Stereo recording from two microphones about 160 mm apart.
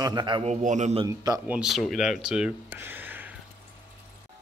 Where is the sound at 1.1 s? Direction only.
20° right (ahead or behind).